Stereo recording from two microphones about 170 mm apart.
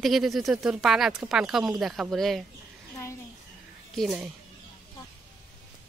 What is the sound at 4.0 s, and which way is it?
Speech, centre (ahead or behind).